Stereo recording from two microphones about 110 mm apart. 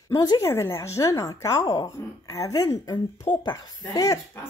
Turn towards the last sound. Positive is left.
turn(degrees=30)  # may be behind; listen again after turning